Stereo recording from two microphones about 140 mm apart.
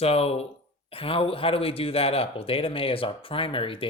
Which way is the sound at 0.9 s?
40° left (ahead or behind).